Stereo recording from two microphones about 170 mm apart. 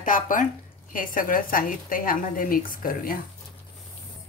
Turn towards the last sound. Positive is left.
turn(degrees=60)  # may be behind; listen again after turning